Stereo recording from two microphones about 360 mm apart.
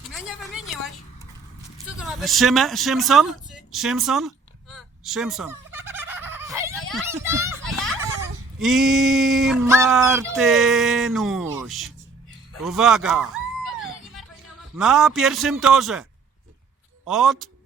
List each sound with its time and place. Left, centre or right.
0.1 s a sound: centre
2.0 s speech: centre
4.7 s fowl: centre
8.6 s speech: centre
13.8 s music: centre
14.8 s speech: centre
17.1 s speech: centre